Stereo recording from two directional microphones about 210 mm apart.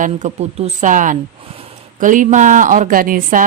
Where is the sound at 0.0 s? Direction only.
35° right (ahead or behind).